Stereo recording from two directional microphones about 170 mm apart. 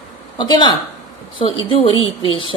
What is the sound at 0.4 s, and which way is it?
A woman's voice, 25° left (ahead or behind).